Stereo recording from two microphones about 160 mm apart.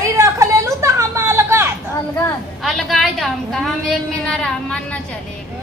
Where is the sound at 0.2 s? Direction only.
20° right (ahead or behind).